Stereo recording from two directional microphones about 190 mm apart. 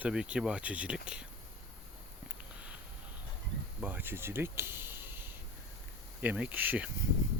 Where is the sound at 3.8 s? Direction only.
10° right (ahead or behind).